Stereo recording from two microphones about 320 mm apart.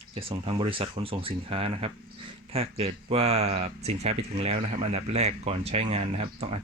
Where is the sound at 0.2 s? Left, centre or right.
Centre.